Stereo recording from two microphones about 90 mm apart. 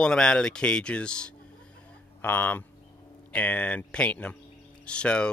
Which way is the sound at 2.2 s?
20° left (ahead or behind).